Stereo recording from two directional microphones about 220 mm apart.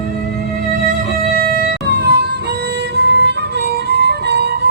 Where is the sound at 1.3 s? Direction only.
40° right (ahead or behind).